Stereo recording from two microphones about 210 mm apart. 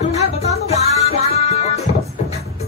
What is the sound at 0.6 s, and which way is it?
Music, 30° left (ahead or behind).